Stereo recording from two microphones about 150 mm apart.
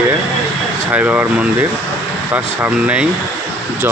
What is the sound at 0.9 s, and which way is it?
Speech, 10° right (ahead or behind).